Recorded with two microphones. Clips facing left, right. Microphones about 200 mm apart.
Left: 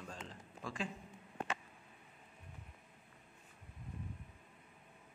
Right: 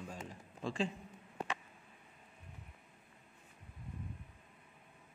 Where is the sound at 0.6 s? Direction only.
30° right (ahead or behind).